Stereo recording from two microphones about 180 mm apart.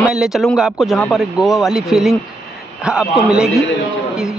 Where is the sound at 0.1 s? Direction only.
5° right (ahead or behind).